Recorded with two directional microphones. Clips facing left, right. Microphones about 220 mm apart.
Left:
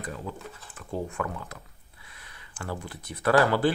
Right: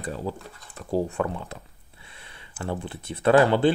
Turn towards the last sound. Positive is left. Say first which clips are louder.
# right 4 dB
turn(degrees=-25)  # may be behind; listen again after turning